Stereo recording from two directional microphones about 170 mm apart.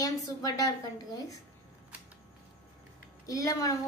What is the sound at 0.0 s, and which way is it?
A woman's voice, 20° left (ahead or behind).